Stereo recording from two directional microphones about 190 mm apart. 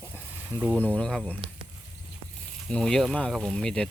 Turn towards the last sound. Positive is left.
turn(degrees=5)  # may be behind; listen again after turning